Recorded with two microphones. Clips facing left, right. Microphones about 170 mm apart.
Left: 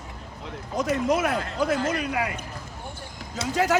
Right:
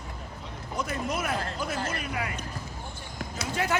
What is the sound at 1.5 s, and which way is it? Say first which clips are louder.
Speech: left 8 dB; 80° left.